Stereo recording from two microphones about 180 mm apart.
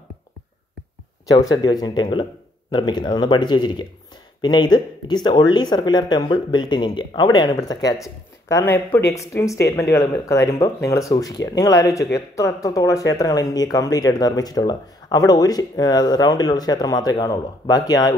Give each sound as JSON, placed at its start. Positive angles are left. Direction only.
{"t": 1.2, "sound": "speech", "side_deg": 20}